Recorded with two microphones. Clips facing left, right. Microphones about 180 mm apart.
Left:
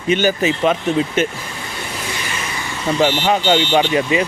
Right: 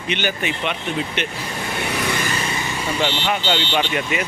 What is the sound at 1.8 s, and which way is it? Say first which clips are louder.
Vehicle: right 5 dB; 65° right (ahead or behind).